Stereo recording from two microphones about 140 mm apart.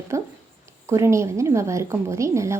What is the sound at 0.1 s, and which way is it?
Speech, 20° right (ahead or behind).